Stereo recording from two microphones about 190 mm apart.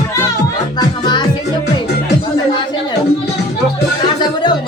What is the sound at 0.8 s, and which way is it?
Music, 25° left (ahead or behind).